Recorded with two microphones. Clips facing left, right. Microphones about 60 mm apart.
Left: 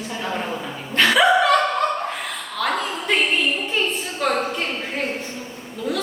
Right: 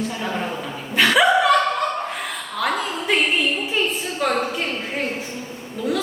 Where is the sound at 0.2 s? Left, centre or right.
Centre.